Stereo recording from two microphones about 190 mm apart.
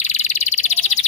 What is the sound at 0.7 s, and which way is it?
Bird vocalization, 35° left (ahead or behind).